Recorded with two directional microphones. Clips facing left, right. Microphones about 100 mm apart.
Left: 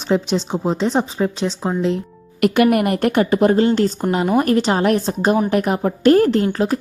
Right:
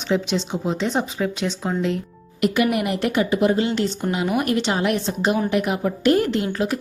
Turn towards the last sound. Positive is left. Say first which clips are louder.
# left 5 dB
turn(degrees=35)  # may be behind; listen again after turning